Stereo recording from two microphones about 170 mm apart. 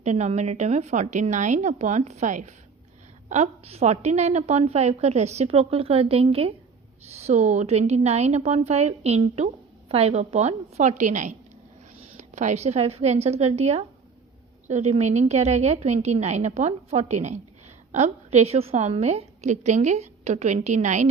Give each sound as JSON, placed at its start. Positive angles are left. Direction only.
{"t": 0.0, "sound": "a woman's voice", "side_deg": -40}